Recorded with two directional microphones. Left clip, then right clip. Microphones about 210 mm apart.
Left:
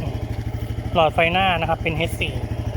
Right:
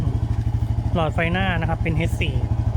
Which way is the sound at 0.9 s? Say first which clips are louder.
Left 6 dB; centre (ahead or behind).